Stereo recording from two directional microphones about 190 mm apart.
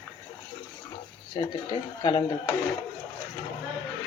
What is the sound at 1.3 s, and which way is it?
Speech, 25° left (ahead or behind).